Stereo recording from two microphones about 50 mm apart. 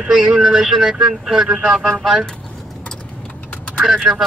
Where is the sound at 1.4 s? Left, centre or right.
Centre.